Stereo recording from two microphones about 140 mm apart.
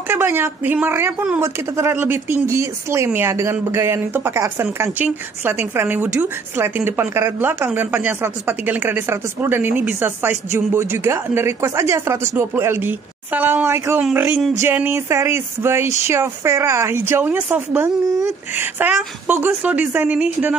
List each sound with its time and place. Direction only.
0.1 s speech: 15° right (ahead or behind)